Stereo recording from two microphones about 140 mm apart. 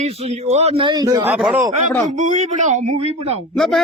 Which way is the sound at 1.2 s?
10° right (ahead or behind).